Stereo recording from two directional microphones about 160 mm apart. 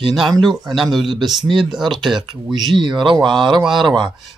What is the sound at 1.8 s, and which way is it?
Speech, 30° right (ahead or behind).